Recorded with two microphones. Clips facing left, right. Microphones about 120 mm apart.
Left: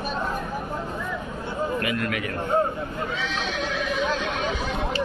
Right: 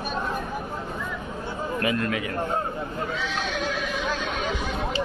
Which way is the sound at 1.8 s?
30° right (ahead or behind).